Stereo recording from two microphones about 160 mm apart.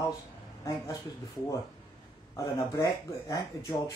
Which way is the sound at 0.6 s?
20° left (ahead or behind).